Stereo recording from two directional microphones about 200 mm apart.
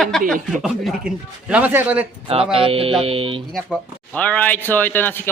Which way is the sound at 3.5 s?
Centre (ahead or behind).